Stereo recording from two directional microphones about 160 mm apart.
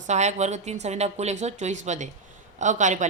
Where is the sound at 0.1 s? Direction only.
45° right (ahead or behind).